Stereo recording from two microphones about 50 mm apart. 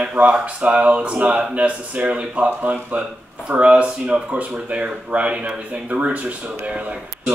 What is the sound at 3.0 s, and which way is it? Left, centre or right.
Speech, right.